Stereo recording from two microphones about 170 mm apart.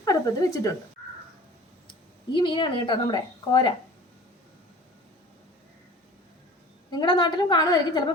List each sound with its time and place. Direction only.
0.0 s a woman's voice: 20° left (ahead or behind)
2.3 s a woman's voice: 25° left (ahead or behind)
6.9 s a woman's voice: 25° left (ahead or behind)